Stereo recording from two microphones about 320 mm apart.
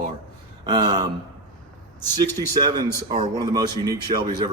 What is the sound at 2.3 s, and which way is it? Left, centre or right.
A man's voice, centre.